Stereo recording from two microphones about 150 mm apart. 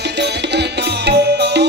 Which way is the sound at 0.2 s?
90° right.